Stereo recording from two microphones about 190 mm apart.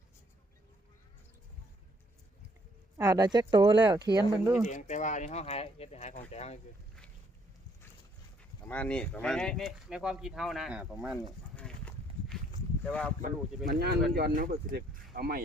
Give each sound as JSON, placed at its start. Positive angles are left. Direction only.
{"t": 3.0, "sound": "speech", "side_deg": -20}
{"t": 4.6, "sound": "speech", "side_deg": 40}
{"t": 8.6, "sound": "speech", "side_deg": 10}
{"t": 11.5, "sound": "horse", "side_deg": 5}
{"t": 12.8, "sound": "speech", "side_deg": 5}
{"t": 13.7, "sound": "speech", "side_deg": -55}